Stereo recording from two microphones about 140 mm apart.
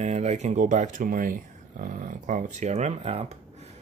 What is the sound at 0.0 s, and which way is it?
Speech, 55° right (ahead or behind).